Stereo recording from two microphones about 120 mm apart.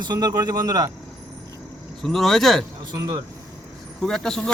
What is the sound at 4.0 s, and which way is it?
Speech, 5° left (ahead or behind).